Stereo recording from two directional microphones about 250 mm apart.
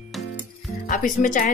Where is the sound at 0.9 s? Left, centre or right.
Left.